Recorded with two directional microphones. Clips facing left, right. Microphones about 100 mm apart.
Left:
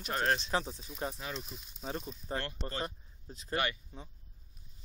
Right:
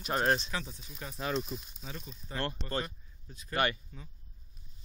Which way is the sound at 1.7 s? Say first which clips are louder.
Left 6 dB; 35° left (ahead or behind).